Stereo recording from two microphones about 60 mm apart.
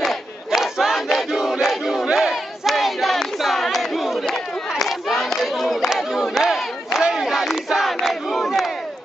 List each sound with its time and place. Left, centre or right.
0.0 s battle cry: centre
4.8 s a sound: centre
5.9 s battle cry: centre